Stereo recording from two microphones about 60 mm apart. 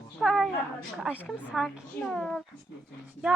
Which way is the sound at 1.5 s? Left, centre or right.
Centre.